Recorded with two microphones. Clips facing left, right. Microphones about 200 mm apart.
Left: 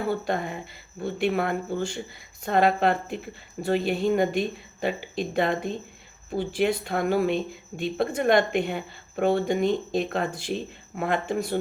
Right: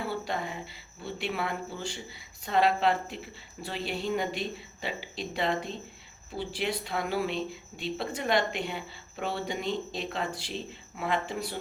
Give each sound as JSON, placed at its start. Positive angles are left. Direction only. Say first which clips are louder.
{"t": 0.0, "sound": "speech", "louder": "left 6 dB", "side_deg": 50}